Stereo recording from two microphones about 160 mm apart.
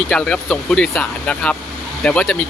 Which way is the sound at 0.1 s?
5° left (ahead or behind).